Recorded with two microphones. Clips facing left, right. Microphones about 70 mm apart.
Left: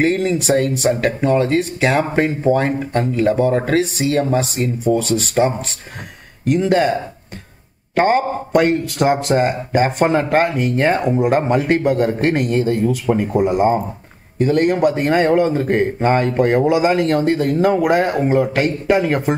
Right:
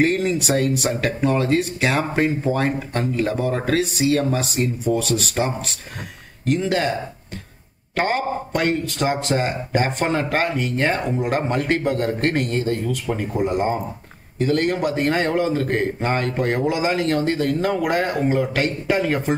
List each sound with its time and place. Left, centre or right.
0.0 s a man's voice: centre
13.1 s speech: left
13.4 s speech: centre